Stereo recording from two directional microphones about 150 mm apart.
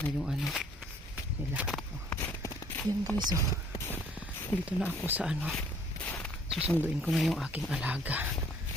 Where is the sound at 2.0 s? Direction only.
15° left (ahead or behind).